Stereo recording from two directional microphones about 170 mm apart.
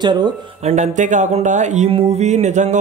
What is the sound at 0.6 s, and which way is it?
Speech, 45° right (ahead or behind).